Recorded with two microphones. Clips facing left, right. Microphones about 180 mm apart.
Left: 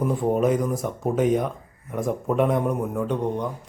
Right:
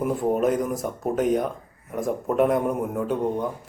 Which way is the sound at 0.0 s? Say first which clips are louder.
Left 1 dB; centre (ahead or behind).